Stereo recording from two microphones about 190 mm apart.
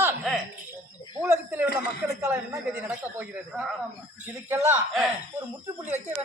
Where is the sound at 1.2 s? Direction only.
15° right (ahead or behind).